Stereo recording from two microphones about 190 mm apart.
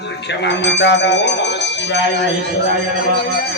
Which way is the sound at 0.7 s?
70° left (ahead or behind).